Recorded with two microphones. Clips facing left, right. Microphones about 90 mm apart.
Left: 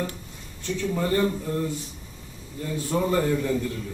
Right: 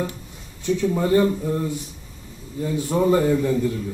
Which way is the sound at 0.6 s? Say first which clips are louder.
Right 5 dB; 15° right (ahead or behind).